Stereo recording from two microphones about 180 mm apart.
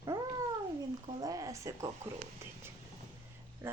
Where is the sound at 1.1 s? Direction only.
20° right (ahead or behind).